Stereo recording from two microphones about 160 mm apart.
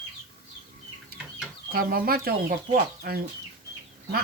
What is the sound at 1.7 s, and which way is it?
Speech, 70° right (ahead or behind).